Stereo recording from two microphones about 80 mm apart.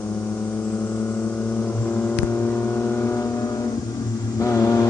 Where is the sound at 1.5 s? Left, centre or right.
Centre.